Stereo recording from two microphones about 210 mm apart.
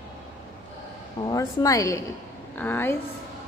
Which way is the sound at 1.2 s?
15° left (ahead or behind).